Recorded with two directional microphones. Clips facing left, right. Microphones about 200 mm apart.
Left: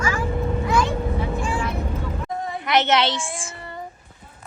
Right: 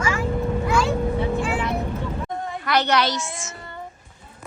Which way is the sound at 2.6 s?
20° left (ahead or behind).